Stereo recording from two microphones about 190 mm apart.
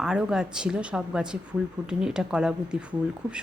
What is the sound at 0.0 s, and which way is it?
Speech, 5° right (ahead or behind).